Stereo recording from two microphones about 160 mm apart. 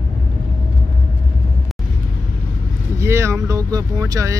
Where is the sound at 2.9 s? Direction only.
15° right (ahead or behind).